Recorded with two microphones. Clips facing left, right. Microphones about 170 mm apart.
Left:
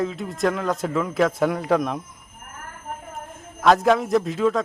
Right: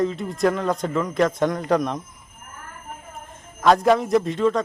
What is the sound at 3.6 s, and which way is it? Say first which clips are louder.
Speech: even; centre (ahead or behind).